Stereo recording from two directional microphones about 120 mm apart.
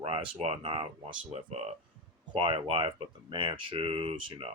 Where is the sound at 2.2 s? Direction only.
45° right (ahead or behind).